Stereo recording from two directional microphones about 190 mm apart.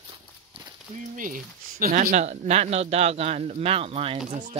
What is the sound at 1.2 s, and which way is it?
Speech, 45° right (ahead or behind).